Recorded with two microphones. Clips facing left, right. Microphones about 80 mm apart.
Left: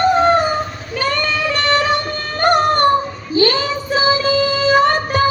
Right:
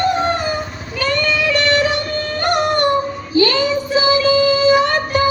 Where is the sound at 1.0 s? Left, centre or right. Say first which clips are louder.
Right 1 dB; left.